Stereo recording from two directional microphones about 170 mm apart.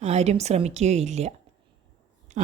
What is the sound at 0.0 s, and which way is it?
A woman's voice, 40° right (ahead or behind).